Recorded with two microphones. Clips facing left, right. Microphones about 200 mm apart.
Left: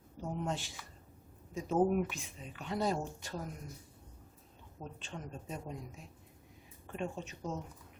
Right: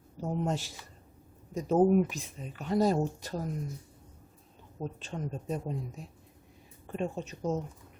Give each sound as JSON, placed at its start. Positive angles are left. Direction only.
{"t": 0.2, "sound": "speech", "side_deg": -40}
{"t": 4.8, "sound": "speech", "side_deg": -35}
{"t": 6.8, "sound": "speech", "side_deg": -40}